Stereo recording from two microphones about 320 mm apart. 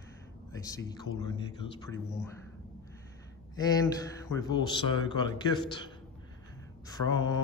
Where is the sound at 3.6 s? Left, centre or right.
Centre.